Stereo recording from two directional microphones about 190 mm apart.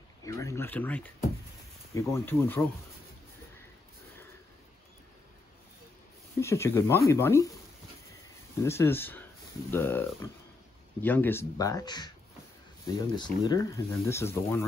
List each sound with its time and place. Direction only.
0.2 s speech: 15° left (ahead or behind)
6.4 s speech: 15° left (ahead or behind)
8.6 s speech: 15° left (ahead or behind)
13.1 s speech: 20° left (ahead or behind)